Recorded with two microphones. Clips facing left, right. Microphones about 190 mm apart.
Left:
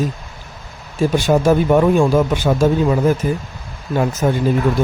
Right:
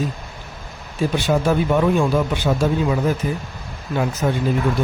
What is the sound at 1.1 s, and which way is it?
Speech, 45° left (ahead or behind).